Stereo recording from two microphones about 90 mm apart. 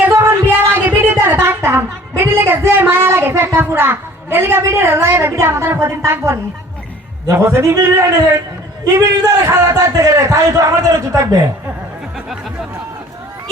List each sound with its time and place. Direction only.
0.1 s a sound: 30° right (ahead or behind)
7.3 s speech: 30° right (ahead or behind)
8.8 s a man's voice: 45° right (ahead or behind)